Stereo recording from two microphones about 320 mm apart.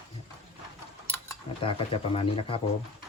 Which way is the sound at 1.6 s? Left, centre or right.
Centre.